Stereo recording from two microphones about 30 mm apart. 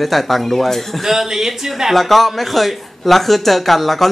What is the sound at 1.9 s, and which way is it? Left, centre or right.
Speech, centre.